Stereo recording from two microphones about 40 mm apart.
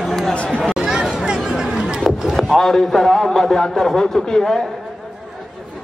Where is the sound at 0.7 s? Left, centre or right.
Centre.